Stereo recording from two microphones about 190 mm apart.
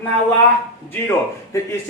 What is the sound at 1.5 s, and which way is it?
Speech, 15° left (ahead or behind).